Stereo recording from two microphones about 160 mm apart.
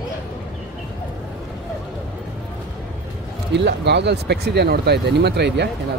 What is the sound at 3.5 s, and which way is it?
Speech, 90° right.